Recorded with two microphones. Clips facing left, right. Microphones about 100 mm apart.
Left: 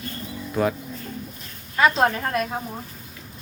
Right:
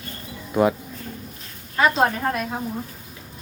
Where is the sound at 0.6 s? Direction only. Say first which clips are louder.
Right 4 dB; 15° right (ahead or behind).